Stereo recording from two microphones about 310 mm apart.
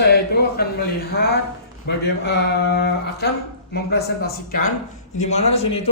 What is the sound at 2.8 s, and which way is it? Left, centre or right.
A man's voice, left.